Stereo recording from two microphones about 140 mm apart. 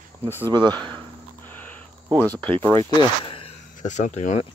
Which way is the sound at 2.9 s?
35° left (ahead or behind).